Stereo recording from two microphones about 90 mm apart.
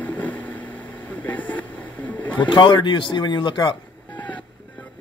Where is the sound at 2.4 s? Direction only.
60° left (ahead or behind).